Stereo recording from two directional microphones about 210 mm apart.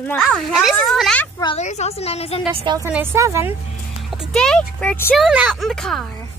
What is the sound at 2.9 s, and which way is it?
Speech, 10° right (ahead or behind).